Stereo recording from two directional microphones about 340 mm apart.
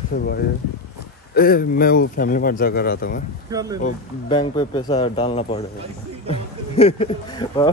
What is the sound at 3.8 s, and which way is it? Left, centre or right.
Speech, centre.